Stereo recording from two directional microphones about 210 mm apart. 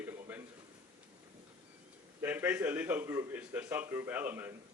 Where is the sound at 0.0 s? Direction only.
10° right (ahead or behind).